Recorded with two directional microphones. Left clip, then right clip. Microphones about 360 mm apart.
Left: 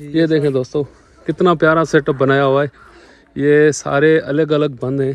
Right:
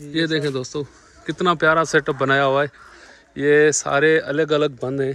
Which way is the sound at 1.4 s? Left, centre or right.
Centre.